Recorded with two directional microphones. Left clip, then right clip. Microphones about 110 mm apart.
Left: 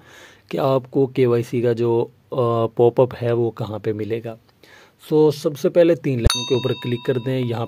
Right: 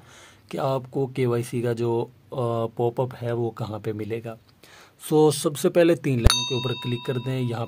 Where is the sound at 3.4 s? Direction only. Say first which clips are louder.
Left 6 dB; 40° left (ahead or behind).